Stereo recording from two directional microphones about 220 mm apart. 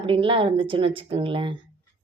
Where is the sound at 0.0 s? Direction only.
25° right (ahead or behind).